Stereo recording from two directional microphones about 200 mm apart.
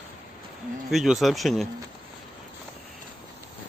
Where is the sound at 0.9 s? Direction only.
Centre (ahead or behind).